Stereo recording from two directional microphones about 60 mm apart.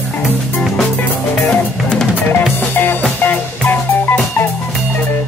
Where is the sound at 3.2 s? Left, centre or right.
Left.